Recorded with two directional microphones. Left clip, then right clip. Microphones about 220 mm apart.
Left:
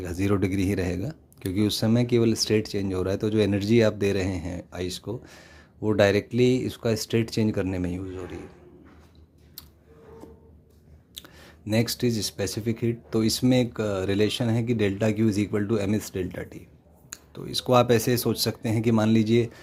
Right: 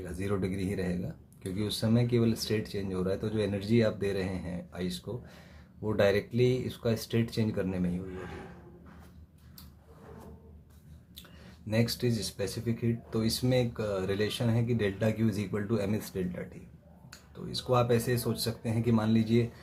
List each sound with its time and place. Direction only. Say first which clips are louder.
0.0 s speech: left 8 dB; 40° left (ahead or behind)
11.2 s a sound: left 8 dB; 40° left (ahead or behind)
11.7 s speech: left 5 dB; 40° left (ahead or behind)